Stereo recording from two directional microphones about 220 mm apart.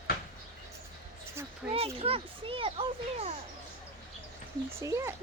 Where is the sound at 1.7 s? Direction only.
25° right (ahead or behind).